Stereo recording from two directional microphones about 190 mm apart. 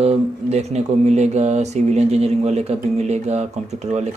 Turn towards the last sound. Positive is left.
turn(degrees=-35)  # may be behind; listen again after turning